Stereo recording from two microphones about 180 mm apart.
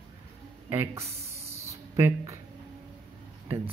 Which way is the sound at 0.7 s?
15° right (ahead or behind).